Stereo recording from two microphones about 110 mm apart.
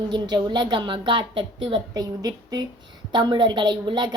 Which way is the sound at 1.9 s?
35° right (ahead or behind).